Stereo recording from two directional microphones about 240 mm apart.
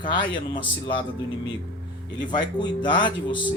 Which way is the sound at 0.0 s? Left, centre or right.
Centre.